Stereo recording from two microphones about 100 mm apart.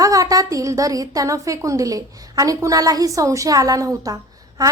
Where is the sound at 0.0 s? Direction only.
35° right (ahead or behind).